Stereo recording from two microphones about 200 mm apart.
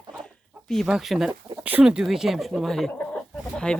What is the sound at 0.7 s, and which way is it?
Speech, centre (ahead or behind).